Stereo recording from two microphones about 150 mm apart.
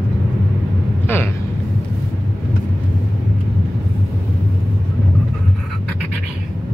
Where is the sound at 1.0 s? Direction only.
15° left (ahead or behind).